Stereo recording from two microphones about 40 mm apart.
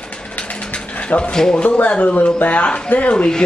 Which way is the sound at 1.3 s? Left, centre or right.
Centre.